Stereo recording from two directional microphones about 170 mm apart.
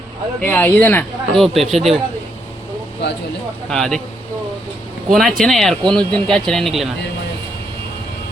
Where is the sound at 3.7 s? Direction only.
Centre (ahead or behind).